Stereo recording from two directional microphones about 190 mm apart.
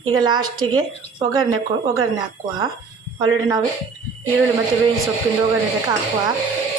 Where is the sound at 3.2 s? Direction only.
20° right (ahead or behind).